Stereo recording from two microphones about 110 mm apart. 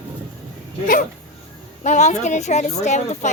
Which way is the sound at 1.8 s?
90° left.